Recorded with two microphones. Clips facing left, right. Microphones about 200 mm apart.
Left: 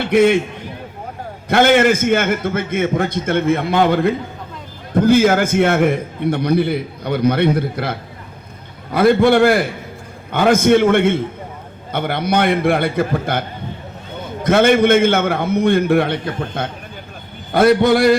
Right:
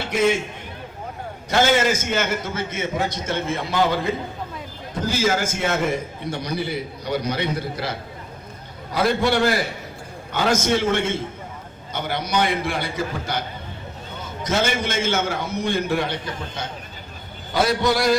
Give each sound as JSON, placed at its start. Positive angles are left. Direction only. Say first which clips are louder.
{"t": 0.0, "sound": "a man's voice", "louder": "left 7 dB", "side_deg": 60}
{"t": 1.5, "sound": "a man's voice", "louder": "left 6 dB", "side_deg": 60}